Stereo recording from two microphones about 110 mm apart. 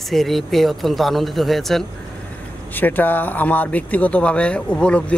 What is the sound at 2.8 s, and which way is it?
A man's voice, 15° left (ahead or behind).